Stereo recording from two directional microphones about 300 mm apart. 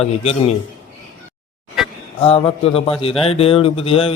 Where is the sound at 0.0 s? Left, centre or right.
Centre.